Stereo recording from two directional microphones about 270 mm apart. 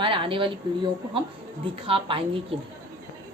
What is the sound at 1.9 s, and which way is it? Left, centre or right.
Speech, centre.